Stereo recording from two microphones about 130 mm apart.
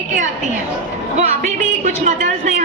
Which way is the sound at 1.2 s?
65° right (ahead or behind).